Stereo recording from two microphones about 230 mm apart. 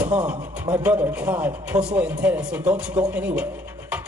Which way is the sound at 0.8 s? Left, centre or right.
Centre.